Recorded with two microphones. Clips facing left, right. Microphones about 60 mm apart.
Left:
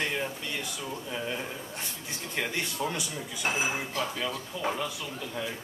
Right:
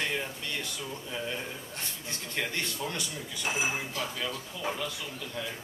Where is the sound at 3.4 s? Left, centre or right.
Left.